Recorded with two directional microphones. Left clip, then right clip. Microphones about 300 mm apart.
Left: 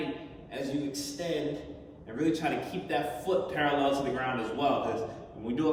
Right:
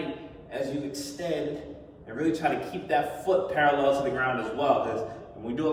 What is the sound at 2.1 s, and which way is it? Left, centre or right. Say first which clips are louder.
A man's voice: right 3 dB; centre.